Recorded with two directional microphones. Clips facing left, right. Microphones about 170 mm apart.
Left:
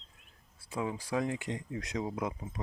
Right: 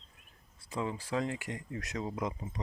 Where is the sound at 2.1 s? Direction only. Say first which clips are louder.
Left 1 dB; 5° left (ahead or behind).